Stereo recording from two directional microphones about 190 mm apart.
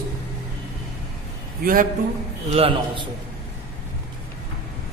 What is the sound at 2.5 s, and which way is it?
Speech, 30° right (ahead or behind).